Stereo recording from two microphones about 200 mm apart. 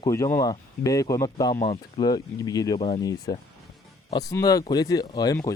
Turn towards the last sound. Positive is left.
turn(degrees=15)  # may be behind; listen again after turning